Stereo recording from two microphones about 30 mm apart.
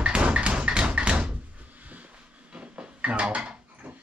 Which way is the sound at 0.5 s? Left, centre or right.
Right.